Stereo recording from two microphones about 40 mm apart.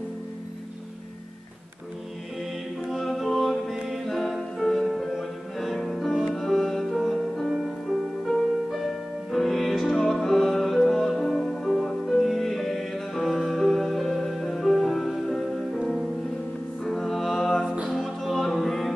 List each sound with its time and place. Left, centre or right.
2.9 s music: centre
3.7 s music: centre
4.0 s music: centre
7.5 s music: centre
11.1 s music: centre